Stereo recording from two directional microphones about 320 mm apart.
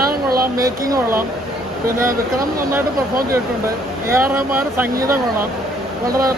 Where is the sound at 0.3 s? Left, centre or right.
Right.